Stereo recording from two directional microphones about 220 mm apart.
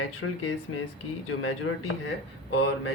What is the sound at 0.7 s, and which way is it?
Speech, 65° left (ahead or behind).